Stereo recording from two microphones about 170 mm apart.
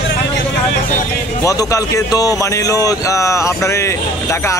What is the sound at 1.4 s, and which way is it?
Speech, 20° left (ahead or behind).